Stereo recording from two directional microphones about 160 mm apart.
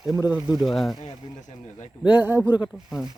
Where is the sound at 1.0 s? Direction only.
45° left (ahead or behind).